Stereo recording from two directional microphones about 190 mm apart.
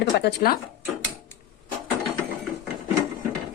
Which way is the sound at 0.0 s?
60° left (ahead or behind).